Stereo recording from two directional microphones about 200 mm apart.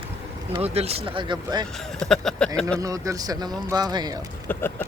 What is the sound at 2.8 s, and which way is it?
Speech, 15° right (ahead or behind).